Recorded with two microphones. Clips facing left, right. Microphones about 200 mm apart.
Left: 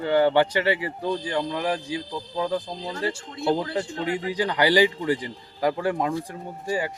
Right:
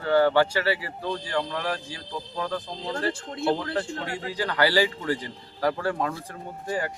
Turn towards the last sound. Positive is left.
turn(degrees=10)  # may be behind; listen again after turning